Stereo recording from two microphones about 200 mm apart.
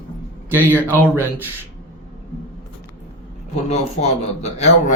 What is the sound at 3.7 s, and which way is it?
Speech, 35° left (ahead or behind).